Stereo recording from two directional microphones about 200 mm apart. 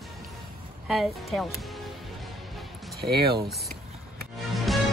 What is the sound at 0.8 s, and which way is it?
Speech, centre (ahead or behind).